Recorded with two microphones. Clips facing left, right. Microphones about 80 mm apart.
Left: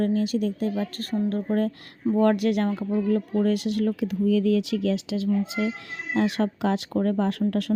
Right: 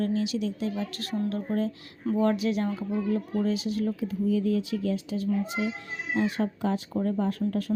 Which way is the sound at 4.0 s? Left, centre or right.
Left.